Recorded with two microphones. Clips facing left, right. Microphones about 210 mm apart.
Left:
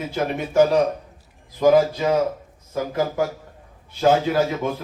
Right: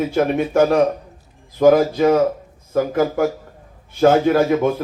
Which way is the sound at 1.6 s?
55° right (ahead or behind).